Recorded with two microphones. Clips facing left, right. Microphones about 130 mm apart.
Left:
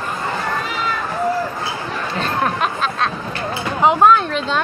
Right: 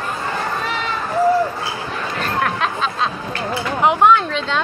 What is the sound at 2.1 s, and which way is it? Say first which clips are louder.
Chatter: left 1 dB; 25° left (ahead or behind).